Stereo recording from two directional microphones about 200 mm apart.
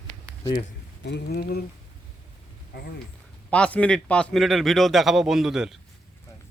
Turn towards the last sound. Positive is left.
turn(degrees=-5)  # may be behind; listen again after turning